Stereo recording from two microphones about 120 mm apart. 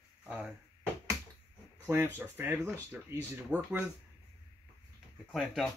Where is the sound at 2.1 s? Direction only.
20° right (ahead or behind).